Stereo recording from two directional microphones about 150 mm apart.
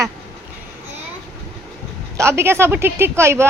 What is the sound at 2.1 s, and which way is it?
Speech, 20° right (ahead or behind).